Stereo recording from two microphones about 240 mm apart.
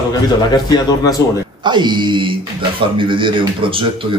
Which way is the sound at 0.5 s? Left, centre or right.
Centre.